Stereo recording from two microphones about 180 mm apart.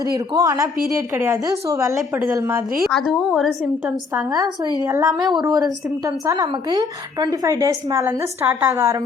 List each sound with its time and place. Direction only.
0.0 s a woman's voice: 20° right (ahead or behind)
3.1 s a woman's voice: centre (ahead or behind)
4.9 s a woman's voice: 20° right (ahead or behind)